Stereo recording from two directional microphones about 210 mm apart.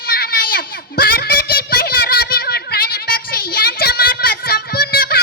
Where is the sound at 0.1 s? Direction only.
45° left (ahead or behind).